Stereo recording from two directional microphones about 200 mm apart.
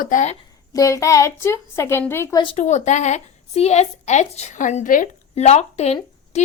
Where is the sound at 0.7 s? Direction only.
15° left (ahead or behind); by 6.4 s 35° left (ahead or behind).